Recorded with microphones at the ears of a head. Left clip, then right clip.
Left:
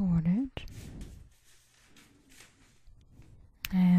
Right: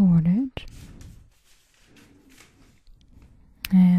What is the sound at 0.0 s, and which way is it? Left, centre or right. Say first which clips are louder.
Whispering: right 9 dB; right.